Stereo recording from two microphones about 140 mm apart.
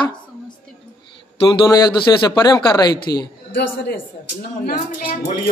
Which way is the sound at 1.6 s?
30° left (ahead or behind).